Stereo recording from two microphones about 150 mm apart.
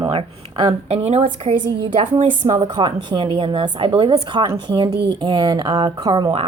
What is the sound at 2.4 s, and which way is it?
Speech, 45° right (ahead or behind).